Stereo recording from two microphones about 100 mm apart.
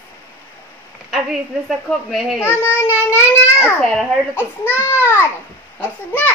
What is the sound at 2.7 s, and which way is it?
Child singing, 15° right (ahead or behind).